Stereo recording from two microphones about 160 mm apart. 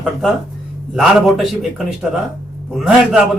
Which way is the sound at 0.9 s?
Centre (ahead or behind).